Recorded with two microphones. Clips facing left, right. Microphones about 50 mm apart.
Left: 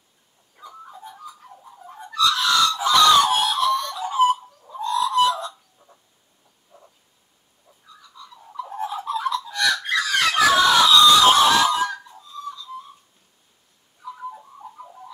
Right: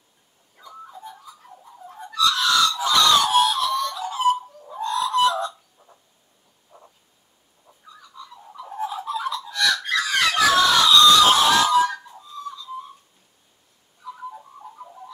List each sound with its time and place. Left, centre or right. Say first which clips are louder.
0.6 s music: even; centre
4.7 s chicken: left 1 dB; right
5.8 s a sound: right 1 dB; centre
8.2 s bird: right 2 dB; right
8.5 s fowl: left 1 dB; centre
9.5 s a sound: right 3 dB; centre
10.1 s screaming: left 1 dB; centre
14.0 s bird: left 1 dB; centre